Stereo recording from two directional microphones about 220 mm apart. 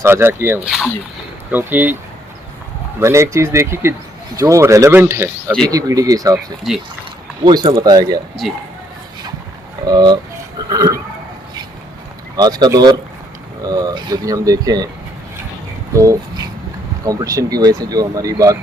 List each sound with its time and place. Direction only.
0.0 s speech: 10° right (ahead or behind)
3.0 s speech: 15° right (ahead or behind)
7.4 s speech: 20° right (ahead or behind)
9.8 s speech: 20° right (ahead or behind)
12.4 s speech: 20° right (ahead or behind)
17.0 s speech: 15° right (ahead or behind)